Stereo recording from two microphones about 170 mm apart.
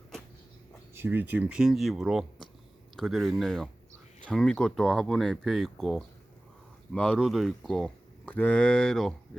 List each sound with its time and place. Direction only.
0.9 s speech: 10° right (ahead or behind); by 9.1 s 5° left (ahead or behind)